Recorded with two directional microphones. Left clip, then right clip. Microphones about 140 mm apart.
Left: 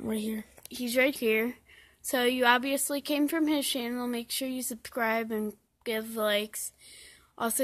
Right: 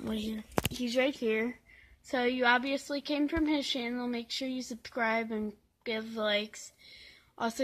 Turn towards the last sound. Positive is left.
turn(degrees=40)  # may be behind; listen again after turning